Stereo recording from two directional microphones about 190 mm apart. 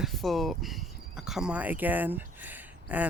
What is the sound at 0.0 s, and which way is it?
Speech, centre (ahead or behind).